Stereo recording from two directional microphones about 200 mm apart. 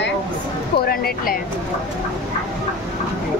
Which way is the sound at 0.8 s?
50° left (ahead or behind).